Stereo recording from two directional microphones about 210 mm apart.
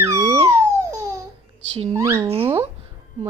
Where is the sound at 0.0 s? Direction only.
15° right (ahead or behind).